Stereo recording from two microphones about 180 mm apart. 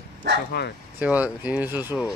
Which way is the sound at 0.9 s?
10° right (ahead or behind).